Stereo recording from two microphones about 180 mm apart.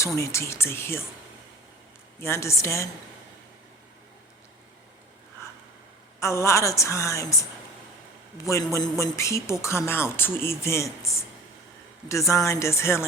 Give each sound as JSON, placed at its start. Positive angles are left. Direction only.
{"t": 0.2, "sound": "speech", "side_deg": 15}
{"t": 2.2, "sound": "speech", "side_deg": 15}
{"t": 6.1, "sound": "speech", "side_deg": 15}
{"t": 8.7, "sound": "speech", "side_deg": 15}
{"t": 12.3, "sound": "speech", "side_deg": 15}